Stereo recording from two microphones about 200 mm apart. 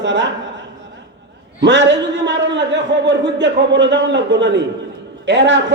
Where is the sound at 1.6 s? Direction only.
65° right (ahead or behind).